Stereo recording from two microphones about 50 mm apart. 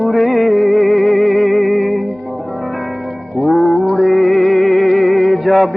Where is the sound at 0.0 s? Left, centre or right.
Centre.